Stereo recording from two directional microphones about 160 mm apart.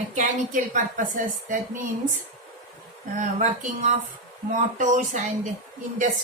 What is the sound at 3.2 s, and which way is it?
A woman's voice, 50° right (ahead or behind).